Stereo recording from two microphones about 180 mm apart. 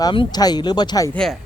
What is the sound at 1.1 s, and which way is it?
Speech, 5° left (ahead or behind).